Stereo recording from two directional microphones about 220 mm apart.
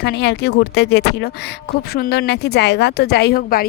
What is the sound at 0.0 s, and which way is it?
A woman's voice, 50° left (ahead or behind).